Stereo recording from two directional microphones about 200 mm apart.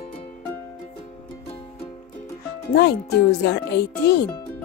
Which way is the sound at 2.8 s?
55° left (ahead or behind).